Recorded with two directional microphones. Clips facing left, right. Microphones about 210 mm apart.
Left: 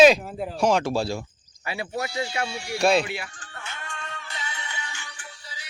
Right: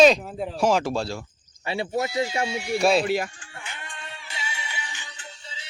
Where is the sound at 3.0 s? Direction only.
40° right (ahead or behind).